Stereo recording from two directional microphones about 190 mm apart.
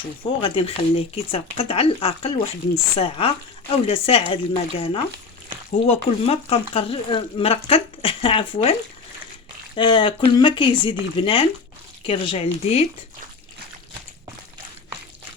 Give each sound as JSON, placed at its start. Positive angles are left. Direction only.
{"t": 0.2, "sound": "speech", "side_deg": 30}
{"t": 9.7, "sound": "speech", "side_deg": 25}